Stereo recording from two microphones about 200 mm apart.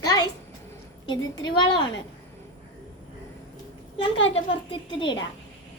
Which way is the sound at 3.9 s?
25° left (ahead or behind).